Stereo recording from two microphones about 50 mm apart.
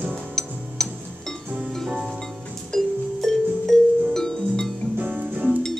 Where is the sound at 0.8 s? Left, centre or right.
Centre.